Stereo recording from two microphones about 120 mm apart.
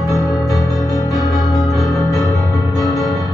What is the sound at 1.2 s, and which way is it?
Keyboard, centre (ahead or behind).